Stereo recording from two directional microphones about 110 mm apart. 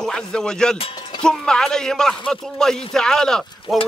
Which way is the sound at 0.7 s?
60° left (ahead or behind).